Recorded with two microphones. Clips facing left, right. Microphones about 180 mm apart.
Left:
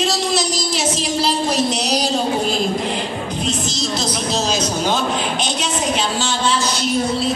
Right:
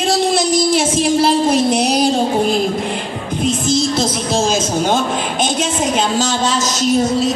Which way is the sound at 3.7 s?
50° right (ahead or behind).